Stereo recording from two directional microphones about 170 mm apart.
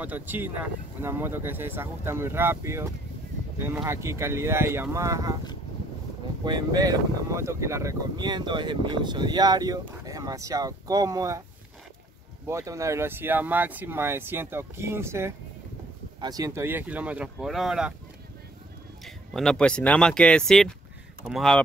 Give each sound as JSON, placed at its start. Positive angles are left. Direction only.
{"t": 0.0, "sound": "speech", "side_deg": -10}
{"t": 6.4, "sound": "speech", "side_deg": -25}
{"t": 12.4, "sound": "speech", "side_deg": -15}
{"t": 19.0, "sound": "speech", "side_deg": 5}